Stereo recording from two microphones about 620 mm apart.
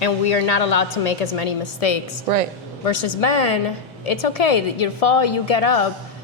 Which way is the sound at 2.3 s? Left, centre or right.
Right.